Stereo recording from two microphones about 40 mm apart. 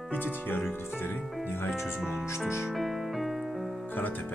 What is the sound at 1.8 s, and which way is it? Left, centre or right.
Speech, centre.